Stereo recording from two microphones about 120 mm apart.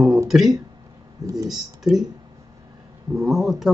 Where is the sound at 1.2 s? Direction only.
30° right (ahead or behind).